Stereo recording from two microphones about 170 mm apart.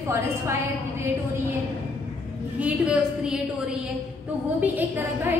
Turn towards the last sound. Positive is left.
turn(degrees=-10)  # may be behind; listen again after turning